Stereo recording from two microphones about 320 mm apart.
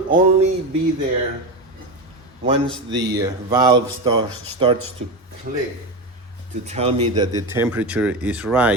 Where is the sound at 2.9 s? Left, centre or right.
Centre.